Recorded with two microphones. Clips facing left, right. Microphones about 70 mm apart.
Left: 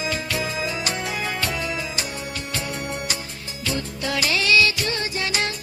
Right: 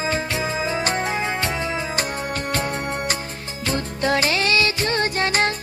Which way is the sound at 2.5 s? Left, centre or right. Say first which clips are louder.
Right 3 dB; right.